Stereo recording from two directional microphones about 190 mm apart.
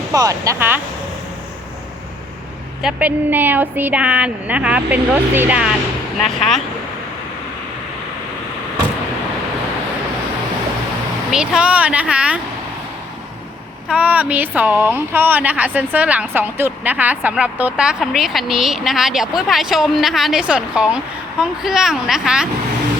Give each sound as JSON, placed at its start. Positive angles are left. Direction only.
{"t": 0.1, "sound": "a woman's voice", "side_deg": -20}
{"t": 2.8, "sound": "a woman's voice", "side_deg": -10}
{"t": 11.3, "sound": "speech", "side_deg": -5}
{"t": 13.8, "sound": "speech", "side_deg": -5}